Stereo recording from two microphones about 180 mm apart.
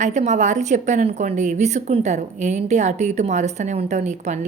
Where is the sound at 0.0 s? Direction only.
40° right (ahead or behind).